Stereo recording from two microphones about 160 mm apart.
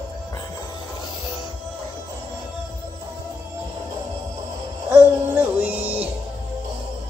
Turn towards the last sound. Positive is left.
turn(degrees=-10)  # may be behind; listen again after turning